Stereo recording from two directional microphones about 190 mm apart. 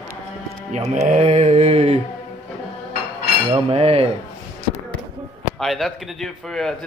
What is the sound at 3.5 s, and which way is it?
Speech, 30° right (ahead or behind).